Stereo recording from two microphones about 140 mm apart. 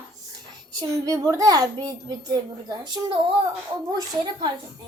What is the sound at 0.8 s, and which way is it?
A child's voice, 25° right (ahead or behind).